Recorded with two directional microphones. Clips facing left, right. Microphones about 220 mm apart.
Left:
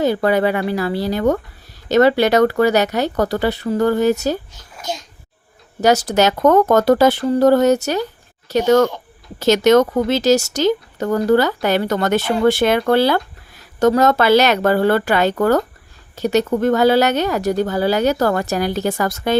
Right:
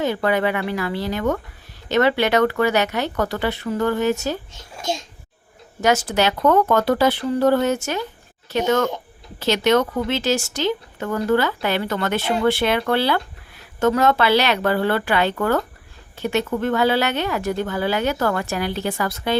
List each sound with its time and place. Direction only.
0.0 s speech: 35° left (ahead or behind)
4.5 s a child's voice: 25° right (ahead or behind)
5.8 s speech: 40° left (ahead or behind)